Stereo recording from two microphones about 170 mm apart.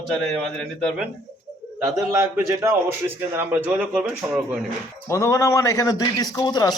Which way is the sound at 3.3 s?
10° right (ahead or behind).